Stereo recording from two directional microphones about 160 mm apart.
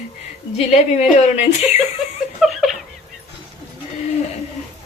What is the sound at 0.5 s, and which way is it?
Speech, 45° left (ahead or behind).